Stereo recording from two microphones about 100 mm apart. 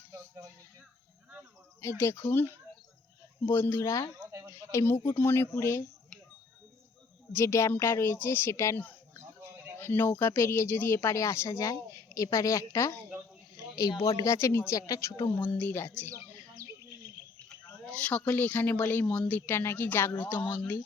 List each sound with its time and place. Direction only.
1.8 s speech: 25° left (ahead or behind)
7.3 s speech: 30° left (ahead or behind)
14.2 s speech: 30° left (ahead or behind)
15.3 s speech: 20° left (ahead or behind)
17.6 s speech: 15° left (ahead or behind)